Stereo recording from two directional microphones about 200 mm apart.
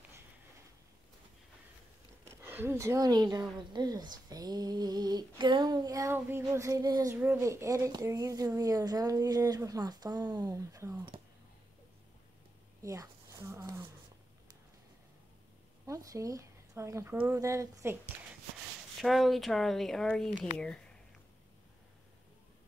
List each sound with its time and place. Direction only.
2.2 s speech: 10° right (ahead or behind)
12.8 s a sound: 15° right (ahead or behind)
15.9 s speech: 15° right (ahead or behind)
18.9 s speech: centre (ahead or behind)